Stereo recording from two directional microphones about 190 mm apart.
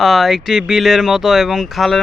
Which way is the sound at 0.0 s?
Centre (ahead or behind).